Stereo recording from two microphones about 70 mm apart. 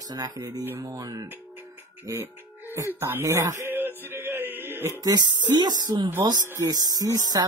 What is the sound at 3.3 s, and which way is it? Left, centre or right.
Speech, right.